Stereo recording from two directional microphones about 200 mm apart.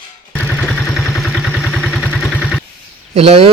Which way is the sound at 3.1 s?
30° right (ahead or behind).